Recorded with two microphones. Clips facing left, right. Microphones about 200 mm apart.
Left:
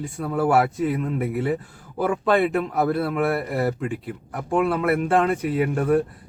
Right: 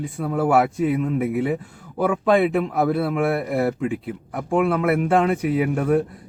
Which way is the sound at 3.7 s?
5° right (ahead or behind).